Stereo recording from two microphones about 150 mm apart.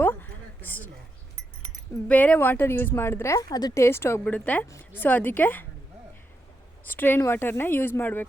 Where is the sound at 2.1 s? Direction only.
10° left (ahead or behind).